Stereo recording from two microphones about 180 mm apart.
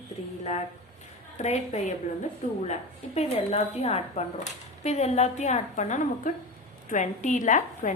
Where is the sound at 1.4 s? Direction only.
40° left (ahead or behind).